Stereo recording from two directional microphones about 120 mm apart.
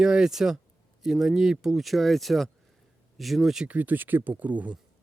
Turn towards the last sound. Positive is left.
turn(degrees=-10)  # may be behind; listen again after turning